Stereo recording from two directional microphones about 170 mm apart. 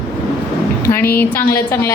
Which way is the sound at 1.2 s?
10° left (ahead or behind).